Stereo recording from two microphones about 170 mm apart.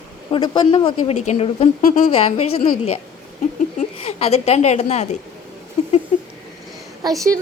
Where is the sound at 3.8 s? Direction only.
35° left (ahead or behind).